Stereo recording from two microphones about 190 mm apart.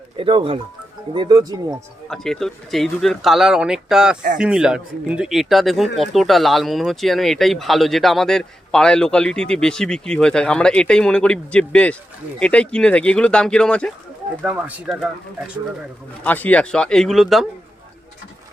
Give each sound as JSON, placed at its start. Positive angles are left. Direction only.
{"t": 0.2, "sound": "speech", "side_deg": -30}
{"t": 2.0, "sound": "speech", "side_deg": 0}
{"t": 14.4, "sound": "speech", "side_deg": -5}
{"t": 16.2, "sound": "speech", "side_deg": 10}